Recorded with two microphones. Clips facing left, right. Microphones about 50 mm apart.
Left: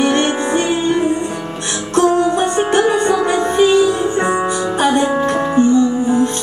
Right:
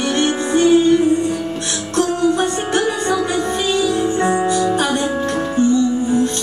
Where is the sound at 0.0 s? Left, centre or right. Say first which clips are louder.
Left 3 dB; left.